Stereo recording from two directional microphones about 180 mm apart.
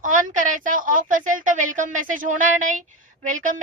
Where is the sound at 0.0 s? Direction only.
45° right (ahead or behind).